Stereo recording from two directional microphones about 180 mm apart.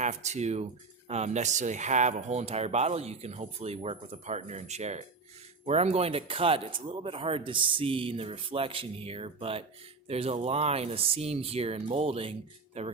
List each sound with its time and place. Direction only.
0.0 s speech: 40° right (ahead or behind)